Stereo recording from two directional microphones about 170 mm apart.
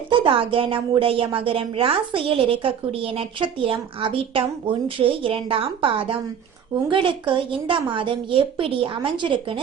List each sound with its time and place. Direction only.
0.1 s a woman's voice: 30° right (ahead or behind)